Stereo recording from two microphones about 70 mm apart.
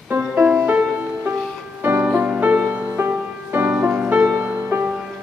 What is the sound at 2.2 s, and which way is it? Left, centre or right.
Music, centre.